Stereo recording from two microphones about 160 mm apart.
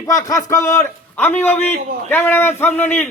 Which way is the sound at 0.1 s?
20° left (ahead or behind).